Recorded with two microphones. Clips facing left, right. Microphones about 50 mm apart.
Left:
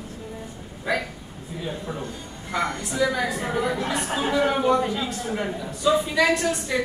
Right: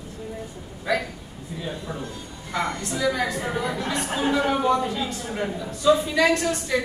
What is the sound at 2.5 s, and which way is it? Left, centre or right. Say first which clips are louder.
A woman's voice: left 1 dB; centre.